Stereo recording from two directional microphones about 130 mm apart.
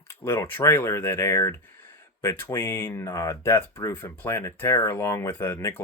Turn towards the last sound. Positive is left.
turn(degrees=20)  # may be behind; listen again after turning